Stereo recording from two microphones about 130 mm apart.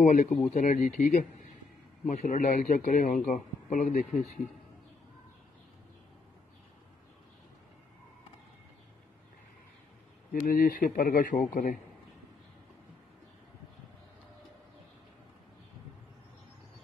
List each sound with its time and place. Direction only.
0.0 s a man's voice: 70° left (ahead or behind)
10.4 s speech: 90° left